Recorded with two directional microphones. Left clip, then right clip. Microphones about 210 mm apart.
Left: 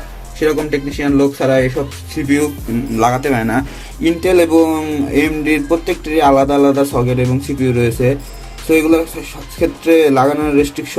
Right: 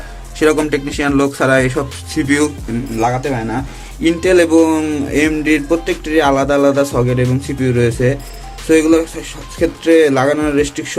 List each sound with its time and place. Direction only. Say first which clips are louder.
0.3 s speech: right 2 dB; 20° right (ahead or behind)
3.0 s speech: left 3 dB; 35° left (ahead or behind)
4.0 s speech: right 1 dB; 5° right (ahead or behind)